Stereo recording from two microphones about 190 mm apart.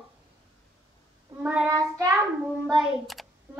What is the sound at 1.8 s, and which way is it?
Speech, 20° right (ahead or behind).